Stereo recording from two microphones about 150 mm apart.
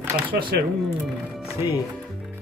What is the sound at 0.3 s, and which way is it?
Speech, 80° right.